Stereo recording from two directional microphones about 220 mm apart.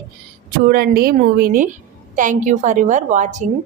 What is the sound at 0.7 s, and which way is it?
A woman's voice, 45° right (ahead or behind).